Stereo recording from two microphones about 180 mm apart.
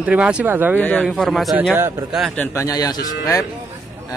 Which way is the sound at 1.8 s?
10° right (ahead or behind).